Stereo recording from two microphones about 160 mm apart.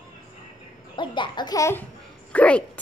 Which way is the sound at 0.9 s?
30° left (ahead or behind).